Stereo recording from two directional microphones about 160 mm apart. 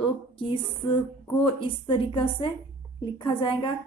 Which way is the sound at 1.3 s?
35° left (ahead or behind).